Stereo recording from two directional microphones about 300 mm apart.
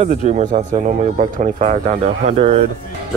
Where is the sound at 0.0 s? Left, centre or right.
Right.